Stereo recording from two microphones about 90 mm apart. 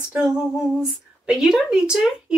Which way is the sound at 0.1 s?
10° right (ahead or behind).